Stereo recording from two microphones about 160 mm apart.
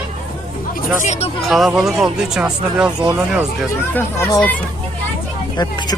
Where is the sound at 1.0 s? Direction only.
45° left (ahead or behind).